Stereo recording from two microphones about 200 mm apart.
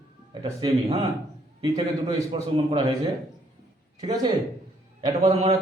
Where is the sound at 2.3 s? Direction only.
25° right (ahead or behind).